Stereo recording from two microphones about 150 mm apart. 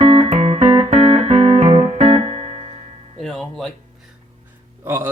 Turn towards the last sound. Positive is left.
turn(degrees=-15)  # may be behind; listen again after turning